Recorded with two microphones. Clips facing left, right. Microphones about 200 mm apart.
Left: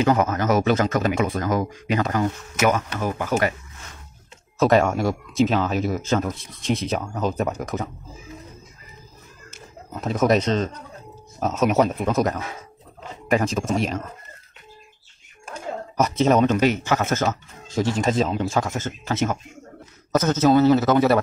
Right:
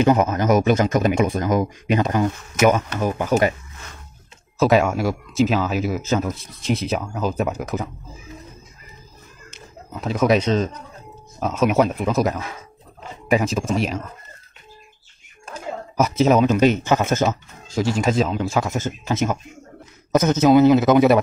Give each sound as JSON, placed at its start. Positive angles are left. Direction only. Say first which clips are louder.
{"t": 0.0, "sound": "speech", "louder": "right 3 dB", "side_deg": -20}
{"t": 4.6, "sound": "speech", "louder": "right 1 dB", "side_deg": -5}
{"t": 10.2, "sound": "speech", "louder": "right 2 dB", "side_deg": -5}
{"t": 16.0, "sound": "speech", "louder": "right 2 dB", "side_deg": -5}
{"t": 16.5, "sound": "speech", "louder": "right 3 dB", "side_deg": -20}
{"t": 17.6, "sound": "speech", "louder": "right 1 dB", "side_deg": 0}